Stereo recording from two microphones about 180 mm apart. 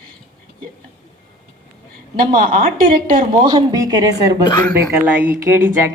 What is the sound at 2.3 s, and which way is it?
Speech, 50° right (ahead or behind).